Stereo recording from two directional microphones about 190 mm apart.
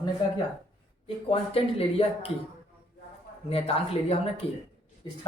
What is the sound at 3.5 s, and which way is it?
Speech, 30° left (ahead or behind).